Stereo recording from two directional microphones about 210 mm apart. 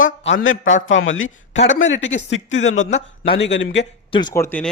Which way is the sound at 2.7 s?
35° left (ahead or behind).